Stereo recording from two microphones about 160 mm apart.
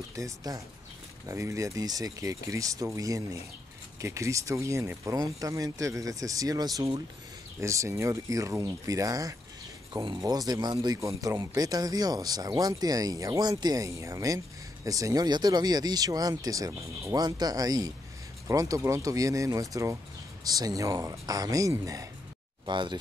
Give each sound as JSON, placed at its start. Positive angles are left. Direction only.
{"t": 0.1, "sound": "speech", "side_deg": -20}